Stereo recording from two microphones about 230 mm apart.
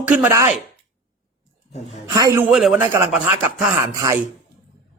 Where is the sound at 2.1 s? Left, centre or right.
Centre.